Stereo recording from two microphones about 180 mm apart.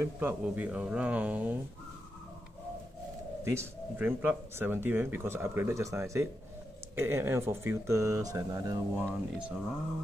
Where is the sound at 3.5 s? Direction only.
15° right (ahead or behind).